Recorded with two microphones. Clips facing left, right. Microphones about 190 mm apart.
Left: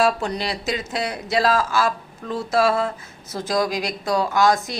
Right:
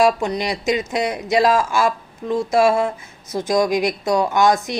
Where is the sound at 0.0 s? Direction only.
15° right (ahead or behind).